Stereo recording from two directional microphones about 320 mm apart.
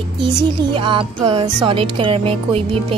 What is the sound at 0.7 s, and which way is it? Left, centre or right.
Music, centre.